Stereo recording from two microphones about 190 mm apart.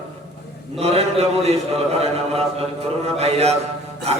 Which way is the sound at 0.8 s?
35° right (ahead or behind).